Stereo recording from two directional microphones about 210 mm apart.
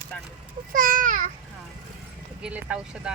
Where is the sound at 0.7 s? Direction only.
40° right (ahead or behind).